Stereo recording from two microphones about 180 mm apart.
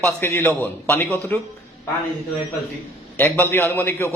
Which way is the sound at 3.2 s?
10° left (ahead or behind).